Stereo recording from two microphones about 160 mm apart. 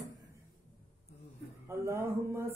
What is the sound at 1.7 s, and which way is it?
Mantra, 15° right (ahead or behind).